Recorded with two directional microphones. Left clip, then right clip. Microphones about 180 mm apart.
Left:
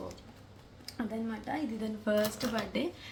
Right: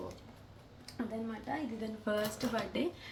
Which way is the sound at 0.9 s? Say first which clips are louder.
Left 2 dB; 20° left (ahead or behind).